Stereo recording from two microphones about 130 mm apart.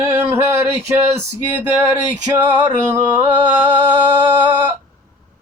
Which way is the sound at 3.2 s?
10° right (ahead or behind).